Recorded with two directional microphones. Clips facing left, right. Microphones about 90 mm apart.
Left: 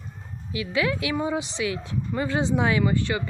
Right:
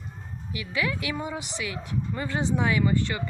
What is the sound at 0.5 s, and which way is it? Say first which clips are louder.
Speech: left 4 dB; 25° left (ahead or behind).